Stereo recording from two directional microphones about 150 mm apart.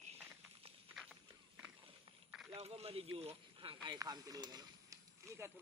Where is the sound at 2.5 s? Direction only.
45° right (ahead or behind); by 5.5 s 20° right (ahead or behind).